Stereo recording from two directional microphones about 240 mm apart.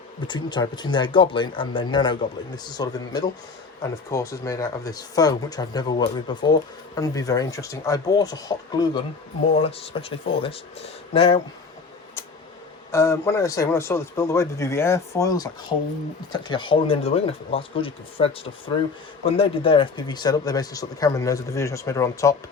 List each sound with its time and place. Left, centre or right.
0.3 s speech: centre
12.9 s speech: centre